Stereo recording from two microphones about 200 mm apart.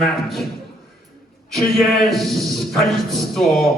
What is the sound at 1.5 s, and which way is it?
A man's voice, centre (ahead or behind).